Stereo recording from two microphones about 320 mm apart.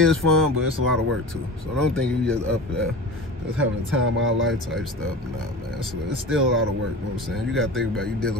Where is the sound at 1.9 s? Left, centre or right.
Centre.